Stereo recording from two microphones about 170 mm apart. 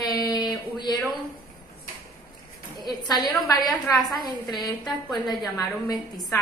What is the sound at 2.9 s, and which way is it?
A woman's voice, 25° left (ahead or behind).